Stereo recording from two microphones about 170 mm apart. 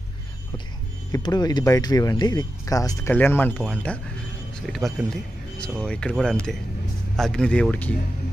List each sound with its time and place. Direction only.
1.1 s speech: 25° left (ahead or behind); by 7.9 s 10° left (ahead or behind)